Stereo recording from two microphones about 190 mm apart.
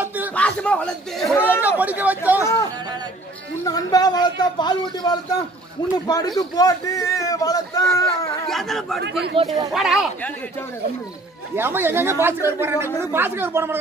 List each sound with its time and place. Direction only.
0.0 s a sound: 10° right (ahead or behind)
0.3 s a man's voice: 5° left (ahead or behind)
1.8 s speech: 10° right (ahead or behind)
3.6 s a man's voice: 20° left (ahead or behind)
8.5 s a man's voice: centre (ahead or behind)
9.4 s speech: 30° right (ahead or behind)
9.8 s a man's voice: centre (ahead or behind)
11.5 s speech: 10° right (ahead or behind)